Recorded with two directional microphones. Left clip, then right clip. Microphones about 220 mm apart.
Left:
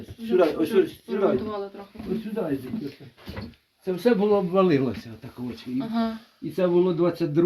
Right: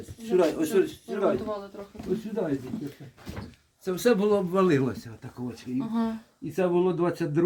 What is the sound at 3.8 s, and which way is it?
Speech, 15° right (ahead or behind).